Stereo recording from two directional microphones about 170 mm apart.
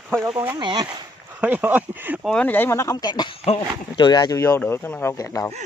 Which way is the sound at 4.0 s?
25° left (ahead or behind).